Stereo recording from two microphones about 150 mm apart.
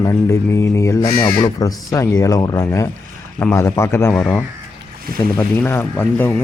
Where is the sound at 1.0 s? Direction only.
30° left (ahead or behind).